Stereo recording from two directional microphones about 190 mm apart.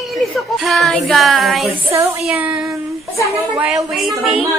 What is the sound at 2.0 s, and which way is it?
Music, 10° right (ahead or behind).